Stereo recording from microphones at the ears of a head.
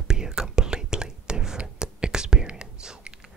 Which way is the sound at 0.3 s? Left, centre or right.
Centre.